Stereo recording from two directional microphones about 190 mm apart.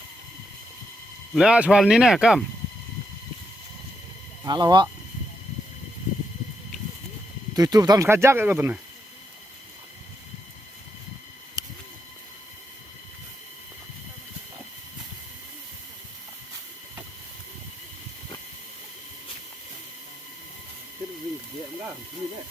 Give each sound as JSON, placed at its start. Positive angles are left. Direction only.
{"t": 1.3, "sound": "speech", "side_deg": -5}
{"t": 4.4, "sound": "speech", "side_deg": -20}
{"t": 7.5, "sound": "speech", "side_deg": -20}
{"t": 11.6, "sound": "a sound", "side_deg": -20}